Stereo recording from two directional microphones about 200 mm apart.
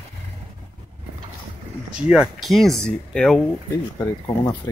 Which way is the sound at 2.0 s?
5° right (ahead or behind).